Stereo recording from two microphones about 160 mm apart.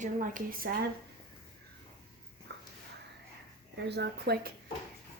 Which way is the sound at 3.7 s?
90° right.